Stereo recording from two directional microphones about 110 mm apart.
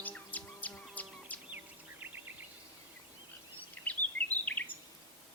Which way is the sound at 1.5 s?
15° right (ahead or behind).